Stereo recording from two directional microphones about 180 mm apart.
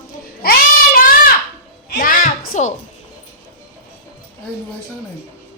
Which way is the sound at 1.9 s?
50° left (ahead or behind).